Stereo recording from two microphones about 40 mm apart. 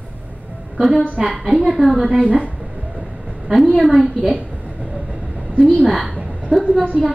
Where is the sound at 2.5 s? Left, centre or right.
Centre.